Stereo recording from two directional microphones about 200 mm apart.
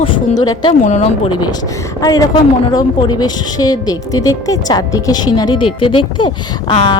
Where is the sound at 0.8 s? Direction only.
35° left (ahead or behind).